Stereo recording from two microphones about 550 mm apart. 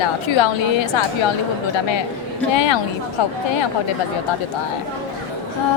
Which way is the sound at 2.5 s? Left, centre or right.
Left.